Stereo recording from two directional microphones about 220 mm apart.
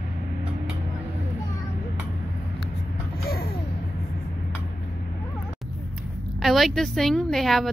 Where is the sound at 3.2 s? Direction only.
45° left (ahead or behind).